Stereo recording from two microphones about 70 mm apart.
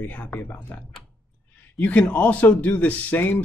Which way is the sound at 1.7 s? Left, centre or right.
Left.